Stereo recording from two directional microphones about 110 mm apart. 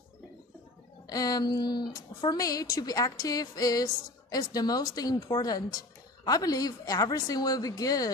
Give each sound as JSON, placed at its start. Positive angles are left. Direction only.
{"t": 1.0, "sound": "speech", "side_deg": 35}